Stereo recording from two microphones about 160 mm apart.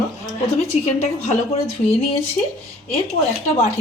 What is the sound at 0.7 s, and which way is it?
Speech, 40° left (ahead or behind).